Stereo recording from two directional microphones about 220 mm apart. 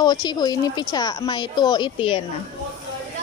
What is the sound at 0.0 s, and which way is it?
Speech, 20° left (ahead or behind).